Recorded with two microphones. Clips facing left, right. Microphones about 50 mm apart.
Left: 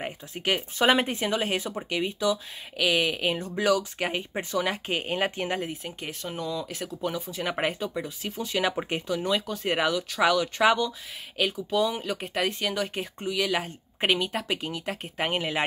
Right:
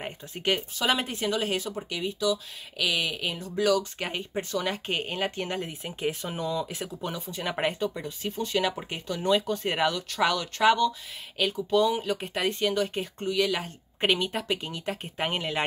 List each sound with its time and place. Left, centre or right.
0.0 s speech: centre
0.7 s speech: left
3.7 s speech: centre
5.1 s speech: left
5.9 s speech: centre
8.7 s speech: left
9.0 s speech: centre